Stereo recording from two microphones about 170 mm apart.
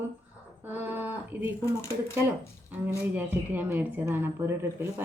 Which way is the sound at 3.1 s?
10° right (ahead or behind).